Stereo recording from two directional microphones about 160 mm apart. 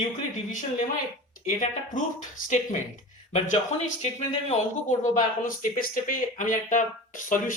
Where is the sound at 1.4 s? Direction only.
55° left (ahead or behind).